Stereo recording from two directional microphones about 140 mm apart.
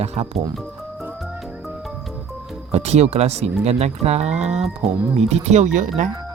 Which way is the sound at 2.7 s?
50° right (ahead or behind).